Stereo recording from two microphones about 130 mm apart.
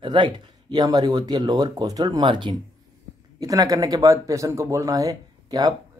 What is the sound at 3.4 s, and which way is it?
Speech, 25° right (ahead or behind).